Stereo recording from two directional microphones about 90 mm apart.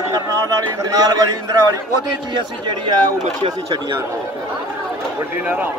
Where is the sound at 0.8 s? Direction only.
45° right (ahead or behind).